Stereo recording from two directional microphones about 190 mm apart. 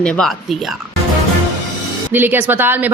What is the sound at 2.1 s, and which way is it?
Speech, 10° right (ahead or behind).